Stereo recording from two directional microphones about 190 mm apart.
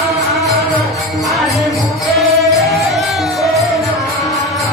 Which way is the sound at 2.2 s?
Centre (ahead or behind).